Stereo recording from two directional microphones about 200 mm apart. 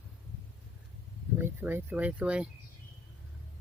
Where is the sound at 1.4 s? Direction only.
10° right (ahead or behind).